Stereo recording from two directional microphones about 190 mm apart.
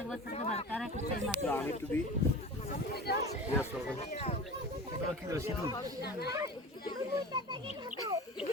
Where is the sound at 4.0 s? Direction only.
35° left (ahead or behind).